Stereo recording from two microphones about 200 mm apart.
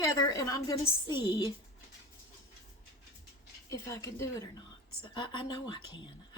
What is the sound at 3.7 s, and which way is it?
A woman's voice, 15° left (ahead or behind).